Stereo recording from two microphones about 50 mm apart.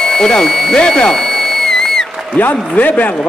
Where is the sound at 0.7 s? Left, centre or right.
Centre.